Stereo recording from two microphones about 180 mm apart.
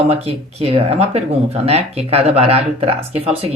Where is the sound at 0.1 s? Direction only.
35° right (ahead or behind).